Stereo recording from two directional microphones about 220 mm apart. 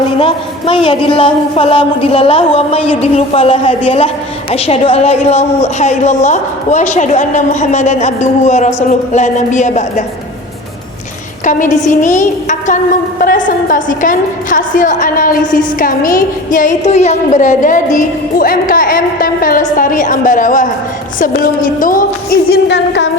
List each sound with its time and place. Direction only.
0.2 s a woman's voice: 25° left (ahead or behind)
11.4 s a woman's voice: 35° left (ahead or behind)